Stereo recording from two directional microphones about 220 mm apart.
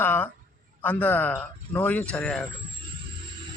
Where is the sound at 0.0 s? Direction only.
10° left (ahead or behind).